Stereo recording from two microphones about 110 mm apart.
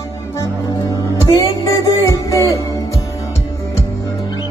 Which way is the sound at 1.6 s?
30° left (ahead or behind).